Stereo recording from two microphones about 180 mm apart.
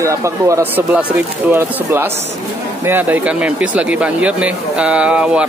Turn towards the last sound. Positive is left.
turn(degrees=-5)  # may be behind; listen again after turning